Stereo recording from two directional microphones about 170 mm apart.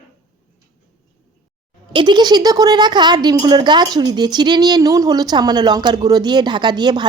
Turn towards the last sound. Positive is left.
turn(degrees=-25)  # may be behind; listen again after turning